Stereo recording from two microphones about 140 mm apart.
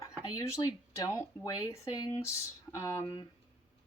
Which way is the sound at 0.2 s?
20° left (ahead or behind).